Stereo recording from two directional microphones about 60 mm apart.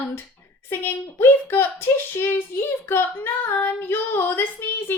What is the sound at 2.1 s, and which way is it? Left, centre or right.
Female singing, left.